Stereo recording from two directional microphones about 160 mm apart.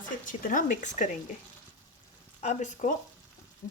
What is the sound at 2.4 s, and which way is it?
Speech, 50° left (ahead or behind).